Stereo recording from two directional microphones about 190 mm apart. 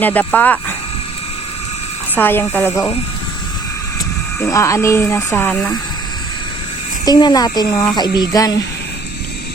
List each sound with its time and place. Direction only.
0.0 s speech: 10° left (ahead or behind)
2.1 s speech: 10° left (ahead or behind)
4.4 s speech: 15° left (ahead or behind)
7.0 s speech: 20° left (ahead or behind)